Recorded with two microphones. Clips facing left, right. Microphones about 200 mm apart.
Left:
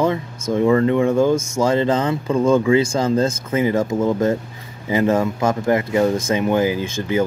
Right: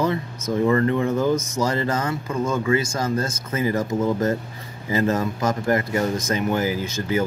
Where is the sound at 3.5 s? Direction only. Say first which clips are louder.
Left 3 dB; 20° left (ahead or behind).